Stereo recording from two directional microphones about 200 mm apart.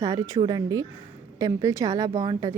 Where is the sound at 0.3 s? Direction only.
20° right (ahead or behind).